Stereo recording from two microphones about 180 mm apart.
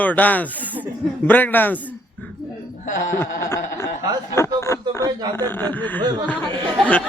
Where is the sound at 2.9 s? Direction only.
45° left (ahead or behind).